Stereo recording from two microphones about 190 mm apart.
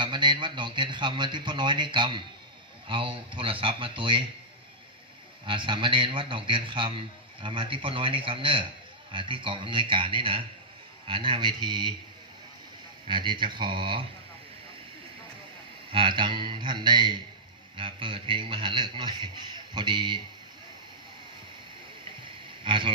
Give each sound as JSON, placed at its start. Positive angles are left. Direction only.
{"t": 0.0, "sound": "a man's voice", "side_deg": -25}
{"t": 5.5, "sound": "a man's voice", "side_deg": -25}
{"t": 13.1, "sound": "a man's voice", "side_deg": -25}
{"t": 15.9, "sound": "a man's voice", "side_deg": -25}
{"t": 22.6, "sound": "speech", "side_deg": -25}